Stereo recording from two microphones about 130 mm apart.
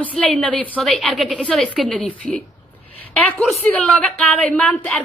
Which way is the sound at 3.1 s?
10° left (ahead or behind).